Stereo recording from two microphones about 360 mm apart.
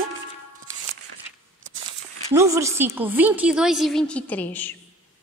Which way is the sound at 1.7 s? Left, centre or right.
Right.